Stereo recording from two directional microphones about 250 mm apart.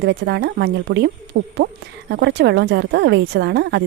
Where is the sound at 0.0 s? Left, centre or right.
Right.